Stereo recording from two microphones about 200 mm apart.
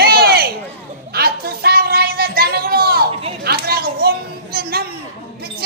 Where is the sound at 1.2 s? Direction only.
50° right (ahead or behind).